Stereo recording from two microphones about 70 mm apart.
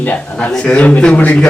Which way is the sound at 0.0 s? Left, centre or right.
Left.